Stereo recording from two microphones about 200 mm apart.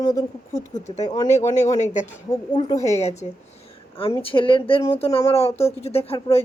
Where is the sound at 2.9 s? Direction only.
35° left (ahead or behind).